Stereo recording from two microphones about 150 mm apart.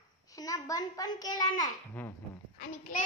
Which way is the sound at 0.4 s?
25° left (ahead or behind).